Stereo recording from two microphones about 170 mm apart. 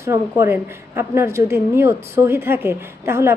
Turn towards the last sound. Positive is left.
turn(degrees=-15)  # may be behind; listen again after turning